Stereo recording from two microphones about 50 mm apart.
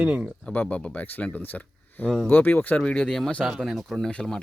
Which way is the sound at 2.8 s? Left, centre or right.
Centre.